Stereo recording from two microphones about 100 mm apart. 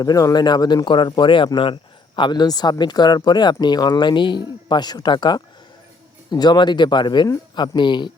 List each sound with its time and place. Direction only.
0.0 s speech: 35° left (ahead or behind)